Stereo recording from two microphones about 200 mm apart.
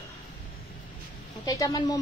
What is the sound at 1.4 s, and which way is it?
Speech, 20° left (ahead or behind).